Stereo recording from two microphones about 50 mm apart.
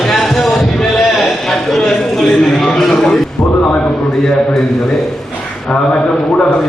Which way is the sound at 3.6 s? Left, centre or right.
Left.